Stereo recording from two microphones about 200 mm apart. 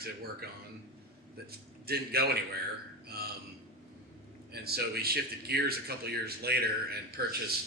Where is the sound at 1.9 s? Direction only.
50° right (ahead or behind).